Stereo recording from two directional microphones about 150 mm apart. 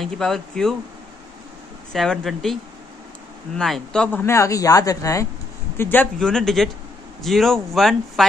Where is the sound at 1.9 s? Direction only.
Centre (ahead or behind).